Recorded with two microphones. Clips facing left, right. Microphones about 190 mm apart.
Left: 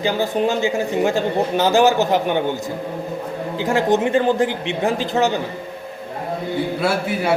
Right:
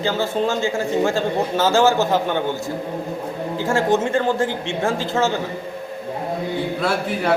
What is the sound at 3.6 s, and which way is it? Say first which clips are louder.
A man's voice: left 1 dB; 20° left (ahead or behind).